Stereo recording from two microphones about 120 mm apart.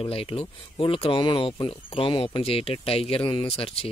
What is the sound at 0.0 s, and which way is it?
Speech, 50° left (ahead or behind).